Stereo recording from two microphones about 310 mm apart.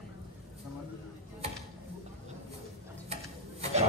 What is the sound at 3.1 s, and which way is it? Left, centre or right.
Ratchet, centre.